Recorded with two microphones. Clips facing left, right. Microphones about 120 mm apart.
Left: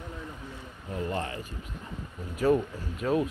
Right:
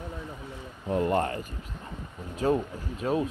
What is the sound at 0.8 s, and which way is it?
Speech, 60° right (ahead or behind).